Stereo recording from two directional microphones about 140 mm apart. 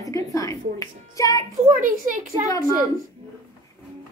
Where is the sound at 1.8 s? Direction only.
70° right (ahead or behind).